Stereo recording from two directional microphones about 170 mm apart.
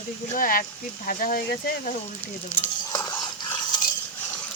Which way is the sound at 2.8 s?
25° left (ahead or behind).